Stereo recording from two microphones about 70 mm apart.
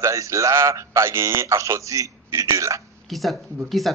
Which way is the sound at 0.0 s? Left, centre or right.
Right.